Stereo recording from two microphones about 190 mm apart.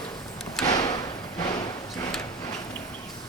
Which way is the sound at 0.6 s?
20° left (ahead or behind).